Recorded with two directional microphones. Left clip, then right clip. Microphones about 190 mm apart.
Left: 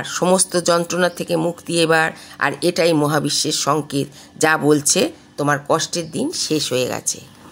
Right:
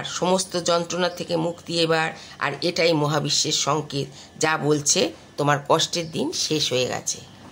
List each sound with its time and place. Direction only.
0.0 s speech: 30° left (ahead or behind)
5.4 s speech: 15° left (ahead or behind)